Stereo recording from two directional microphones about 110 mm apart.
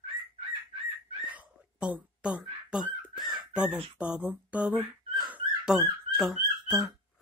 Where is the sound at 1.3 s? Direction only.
10° right (ahead or behind).